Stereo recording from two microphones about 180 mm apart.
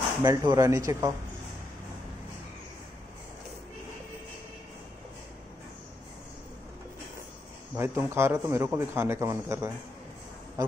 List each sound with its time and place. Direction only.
0.2 s speech: 20° right (ahead or behind)
7.7 s speech: 10° right (ahead or behind)